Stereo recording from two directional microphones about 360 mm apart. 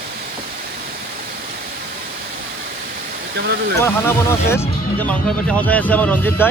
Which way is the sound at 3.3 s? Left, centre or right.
Right.